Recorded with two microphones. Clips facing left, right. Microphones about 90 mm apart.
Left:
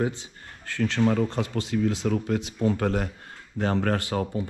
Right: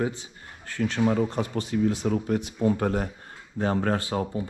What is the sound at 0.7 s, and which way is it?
Speech, 70° left (ahead or behind).